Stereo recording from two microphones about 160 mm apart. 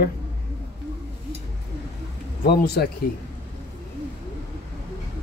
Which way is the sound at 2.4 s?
80° left.